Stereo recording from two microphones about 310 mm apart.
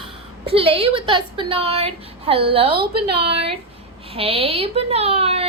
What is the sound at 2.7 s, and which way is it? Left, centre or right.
Speech, right.